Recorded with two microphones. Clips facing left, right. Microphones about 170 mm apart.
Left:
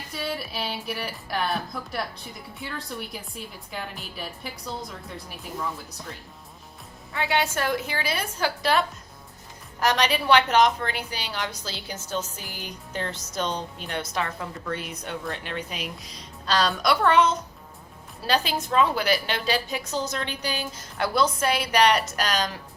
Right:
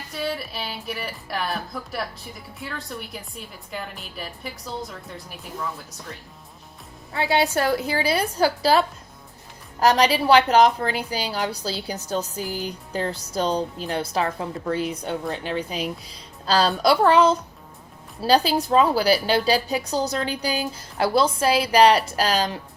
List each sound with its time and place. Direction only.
0.1 s a woman's voice: centre (ahead or behind)
7.1 s a woman's voice: 35° right (ahead or behind)
9.8 s a woman's voice: 35° right (ahead or behind)